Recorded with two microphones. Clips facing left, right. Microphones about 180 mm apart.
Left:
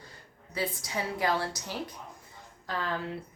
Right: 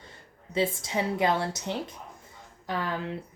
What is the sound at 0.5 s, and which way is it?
Speech, 25° right (ahead or behind).